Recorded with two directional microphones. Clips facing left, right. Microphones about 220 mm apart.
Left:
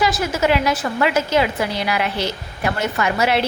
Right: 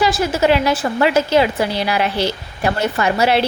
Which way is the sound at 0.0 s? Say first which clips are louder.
Right 3 dB; 30° right (ahead or behind).